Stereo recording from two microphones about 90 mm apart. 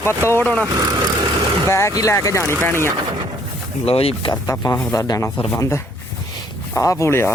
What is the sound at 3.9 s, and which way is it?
Speech, 90° left.